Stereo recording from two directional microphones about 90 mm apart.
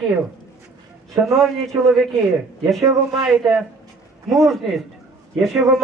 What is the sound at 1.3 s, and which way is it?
A man's voice, centre (ahead or behind).